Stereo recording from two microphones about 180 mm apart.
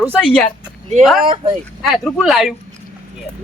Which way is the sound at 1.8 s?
Centre (ahead or behind).